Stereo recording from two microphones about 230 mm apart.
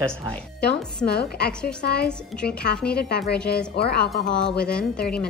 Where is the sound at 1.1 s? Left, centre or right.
Left.